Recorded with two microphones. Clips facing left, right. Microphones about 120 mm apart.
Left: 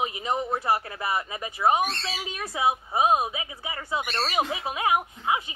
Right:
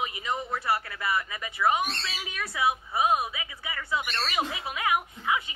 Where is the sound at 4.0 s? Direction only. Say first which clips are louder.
Left 3 dB; 35° left (ahead or behind).